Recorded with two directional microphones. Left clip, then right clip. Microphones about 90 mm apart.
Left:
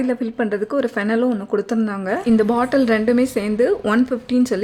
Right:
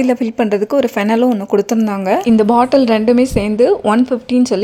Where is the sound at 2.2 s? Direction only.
30° right (ahead or behind).